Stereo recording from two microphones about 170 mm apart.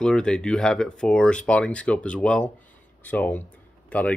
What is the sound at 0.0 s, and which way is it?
Speech, 5° left (ahead or behind).